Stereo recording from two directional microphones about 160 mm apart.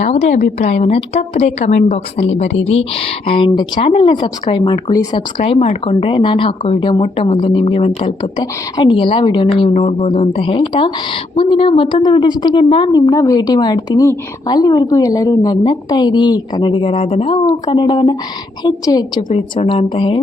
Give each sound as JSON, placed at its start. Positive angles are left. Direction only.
{"t": 0.0, "sound": "a woman's voice", "side_deg": 45}